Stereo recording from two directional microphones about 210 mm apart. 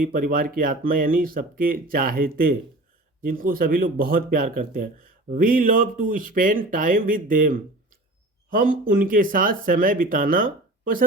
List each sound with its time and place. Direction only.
0.0 s speech: 40° right (ahead or behind)